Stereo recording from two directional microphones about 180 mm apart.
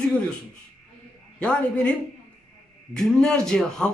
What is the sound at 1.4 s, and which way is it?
Speech, 5° left (ahead or behind).